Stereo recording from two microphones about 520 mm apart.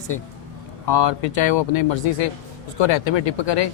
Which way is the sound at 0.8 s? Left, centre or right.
Left.